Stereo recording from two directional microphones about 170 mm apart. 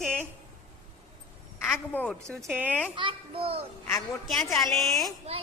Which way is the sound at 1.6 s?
10° left (ahead or behind).